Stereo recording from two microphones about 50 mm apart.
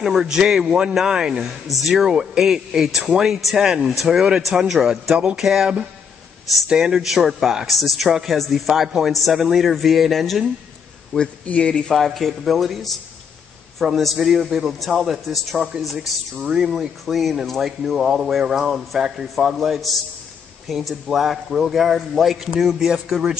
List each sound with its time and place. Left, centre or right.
0.0 s a man's voice: centre
5.1 s a sound: right
5.4 s a man's voice: centre
6.7 s a man's voice: centre
11.1 s speech: left
11.9 s a man's voice: centre
16.4 s speech: centre
17.0 s a man's voice: centre